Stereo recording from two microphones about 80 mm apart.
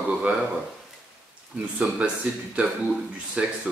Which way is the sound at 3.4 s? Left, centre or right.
Centre.